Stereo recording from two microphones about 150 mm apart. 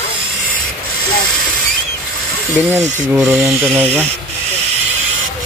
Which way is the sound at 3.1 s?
20° right (ahead or behind).